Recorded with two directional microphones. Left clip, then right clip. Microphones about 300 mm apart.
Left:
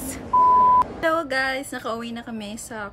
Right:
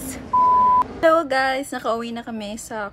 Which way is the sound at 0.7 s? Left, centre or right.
Centre.